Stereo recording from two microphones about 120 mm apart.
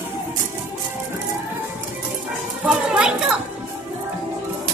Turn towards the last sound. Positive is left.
turn(degrees=-5)  # may be behind; listen again after turning